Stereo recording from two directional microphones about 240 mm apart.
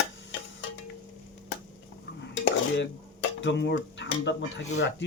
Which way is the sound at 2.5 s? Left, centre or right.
Left.